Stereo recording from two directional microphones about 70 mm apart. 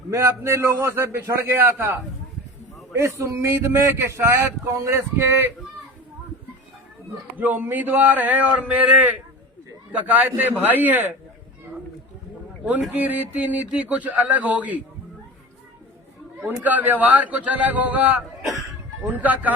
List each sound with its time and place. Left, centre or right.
0.1 s speech: right
7.3 s speech: right
12.6 s speech: right
16.6 s speech: right